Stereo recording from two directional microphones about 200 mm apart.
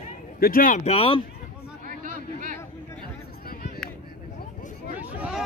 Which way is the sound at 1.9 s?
40° right (ahead or behind).